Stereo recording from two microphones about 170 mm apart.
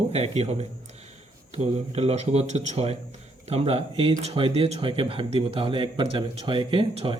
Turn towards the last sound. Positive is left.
turn(degrees=-30)  # may be behind; listen again after turning